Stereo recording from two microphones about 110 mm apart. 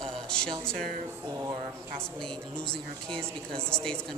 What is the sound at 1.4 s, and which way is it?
Speech, 25° right (ahead or behind).